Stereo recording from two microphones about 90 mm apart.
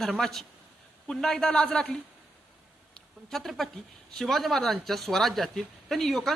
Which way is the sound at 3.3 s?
Centre (ahead or behind).